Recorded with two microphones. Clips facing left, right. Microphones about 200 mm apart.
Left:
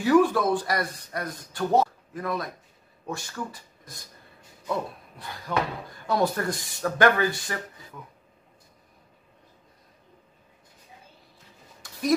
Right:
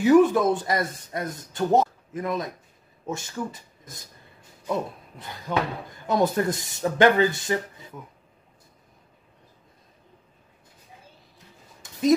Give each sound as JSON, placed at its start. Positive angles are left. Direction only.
{"t": 0.0, "sound": "speech", "side_deg": -20}
{"t": 5.5, "sound": "speech", "side_deg": -20}
{"t": 11.3, "sound": "a sound", "side_deg": -20}